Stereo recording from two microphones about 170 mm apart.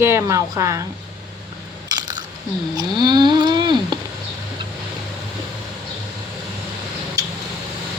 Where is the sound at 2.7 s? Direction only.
25° right (ahead or behind).